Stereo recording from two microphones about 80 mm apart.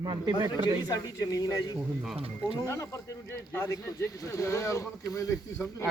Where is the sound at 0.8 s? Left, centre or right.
Left.